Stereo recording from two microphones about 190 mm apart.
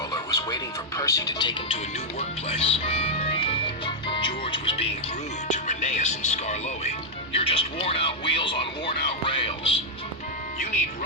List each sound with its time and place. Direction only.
0.1 s speech: 20° left (ahead or behind)